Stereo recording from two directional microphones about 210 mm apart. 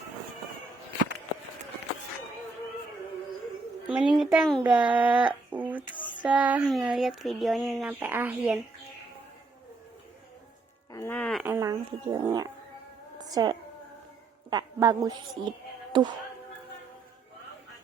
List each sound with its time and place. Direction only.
3.8 s a child's voice: 5° right (ahead or behind)
10.9 s music: 10° left (ahead or behind)
11.4 s speech: 15° right (ahead or behind)
13.1 s a sound: 20° right (ahead or behind)
14.5 s a woman's voice: 15° right (ahead or behind)